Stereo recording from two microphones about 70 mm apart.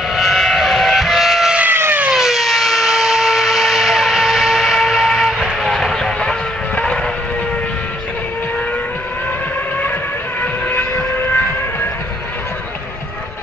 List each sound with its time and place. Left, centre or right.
0.1 s train: centre
1.7 s vehicle: right
2.0 s vehicle: centre
5.6 s a sound: centre
10.4 s vehicle: left